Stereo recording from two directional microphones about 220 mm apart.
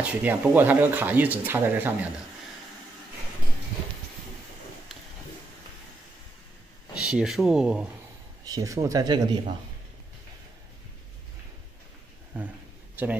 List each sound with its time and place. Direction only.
0.0 s speech: 10° right (ahead or behind)
7.1 s speech: centre (ahead or behind)
8.5 s speech: 15° right (ahead or behind)
12.9 s speech: 5° right (ahead or behind)